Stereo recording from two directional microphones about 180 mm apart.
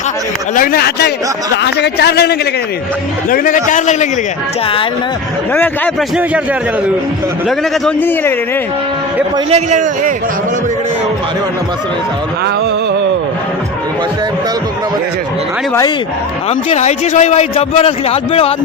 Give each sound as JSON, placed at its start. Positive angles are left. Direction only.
{"t": 0.5, "sound": "speech", "side_deg": 55}
{"t": 3.2, "sound": "a man's voice", "side_deg": 50}
{"t": 5.5, "sound": "a man's voice", "side_deg": 10}
{"t": 7.4, "sound": "a man's voice", "side_deg": 5}
{"t": 9.5, "sound": "a man's voice", "side_deg": -40}
{"t": 16.5, "sound": "a man's voice", "side_deg": 35}